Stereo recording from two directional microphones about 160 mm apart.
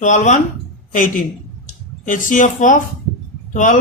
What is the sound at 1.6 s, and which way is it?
A man's voice, 55° left (ahead or behind).